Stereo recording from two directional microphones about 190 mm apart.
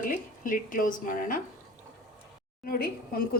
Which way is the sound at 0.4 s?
45° left (ahead or behind).